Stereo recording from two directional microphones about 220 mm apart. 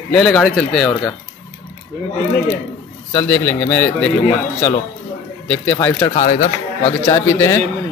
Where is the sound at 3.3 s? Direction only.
5° left (ahead or behind).